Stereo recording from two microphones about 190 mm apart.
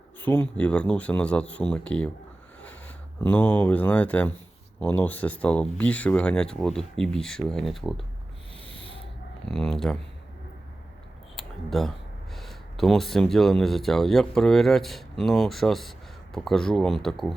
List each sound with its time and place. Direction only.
0.2 s speech: 10° left (ahead or behind)
8.6 s a sound: 30° right (ahead or behind)
9.5 s speech: centre (ahead or behind)
11.3 s speech: centre (ahead or behind)